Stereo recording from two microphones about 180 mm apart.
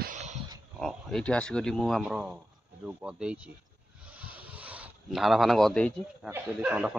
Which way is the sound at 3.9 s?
5° right (ahead or behind).